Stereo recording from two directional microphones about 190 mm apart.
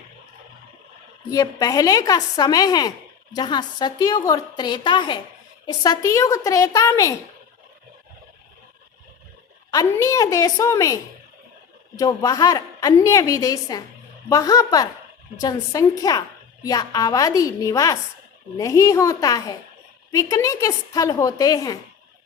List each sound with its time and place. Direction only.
1.3 s a woman's voice: 20° left (ahead or behind)
9.7 s a woman's voice: 20° left (ahead or behind)